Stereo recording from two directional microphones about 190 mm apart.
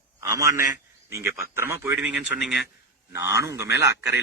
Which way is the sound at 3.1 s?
15° right (ahead or behind).